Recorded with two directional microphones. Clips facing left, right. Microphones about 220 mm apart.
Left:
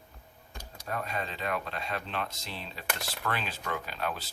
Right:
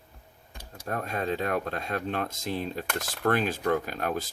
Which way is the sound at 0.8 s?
50° right (ahead or behind).